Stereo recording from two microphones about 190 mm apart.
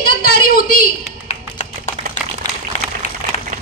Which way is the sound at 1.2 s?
35° left (ahead or behind).